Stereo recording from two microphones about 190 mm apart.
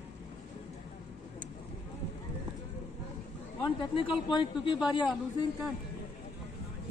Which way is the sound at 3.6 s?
25° left (ahead or behind).